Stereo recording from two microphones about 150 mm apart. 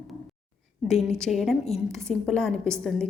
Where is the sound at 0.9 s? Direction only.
5° left (ahead or behind).